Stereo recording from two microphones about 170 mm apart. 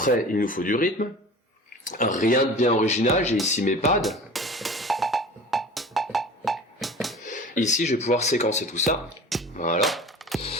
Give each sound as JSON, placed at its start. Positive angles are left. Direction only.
{"t": 0.0, "sound": "speech", "side_deg": 55}
{"t": 4.0, "sound": "music", "side_deg": 0}
{"t": 7.3, "sound": "speech", "side_deg": 50}
{"t": 9.8, "sound": "a sound", "side_deg": 0}